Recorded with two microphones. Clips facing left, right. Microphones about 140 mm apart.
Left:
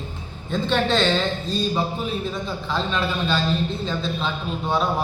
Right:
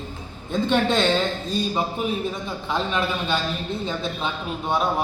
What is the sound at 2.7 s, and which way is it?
Speech, 15° right (ahead or behind).